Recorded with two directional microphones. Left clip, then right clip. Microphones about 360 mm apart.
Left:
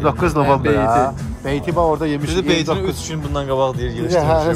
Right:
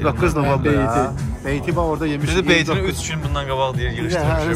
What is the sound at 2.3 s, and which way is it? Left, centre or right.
Speech, centre.